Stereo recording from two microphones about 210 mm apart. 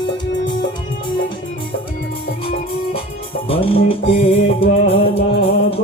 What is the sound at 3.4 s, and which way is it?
Music, 25° left (ahead or behind).